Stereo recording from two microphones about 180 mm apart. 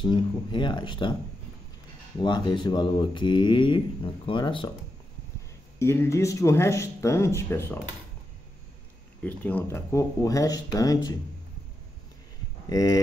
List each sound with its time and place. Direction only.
0.0 s speech: 25° left (ahead or behind)
2.1 s speech: 25° left (ahead or behind)
5.8 s speech: 15° left (ahead or behind)
9.2 s speech: 10° left (ahead or behind)
12.6 s speech: 20° left (ahead or behind)